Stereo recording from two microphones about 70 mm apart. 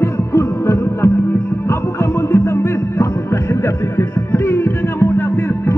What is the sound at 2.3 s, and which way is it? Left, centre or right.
Music, left.